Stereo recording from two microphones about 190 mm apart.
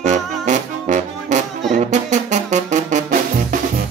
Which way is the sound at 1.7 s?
40° right (ahead or behind).